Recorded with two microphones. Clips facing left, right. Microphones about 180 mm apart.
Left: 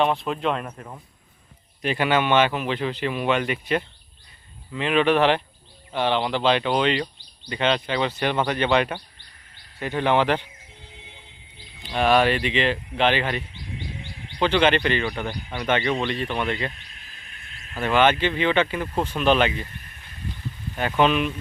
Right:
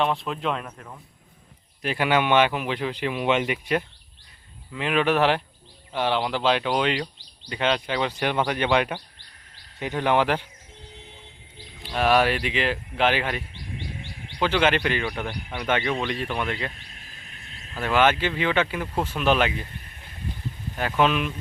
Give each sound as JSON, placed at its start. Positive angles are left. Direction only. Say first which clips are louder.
{"t": 0.0, "sound": "speech", "louder": "left 3 dB", "side_deg": 0}
{"t": 0.8, "sound": "speech", "louder": "left 3 dB", "side_deg": 15}
{"t": 1.8, "sound": "speech", "louder": "left 1 dB", "side_deg": -5}
{"t": 11.9, "sound": "speech", "louder": "left 1 dB", "side_deg": -5}
{"t": 16.9, "sound": "a sound", "louder": "right 2 dB", "side_deg": -45}
{"t": 17.7, "sound": "speech", "louder": "left 2 dB", "side_deg": 0}
{"t": 20.7, "sound": "speech", "louder": "left 2 dB", "side_deg": 0}